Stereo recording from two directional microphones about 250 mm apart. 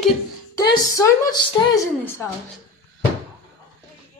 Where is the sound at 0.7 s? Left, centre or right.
Centre.